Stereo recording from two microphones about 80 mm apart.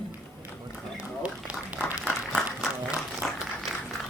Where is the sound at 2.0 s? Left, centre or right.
Centre.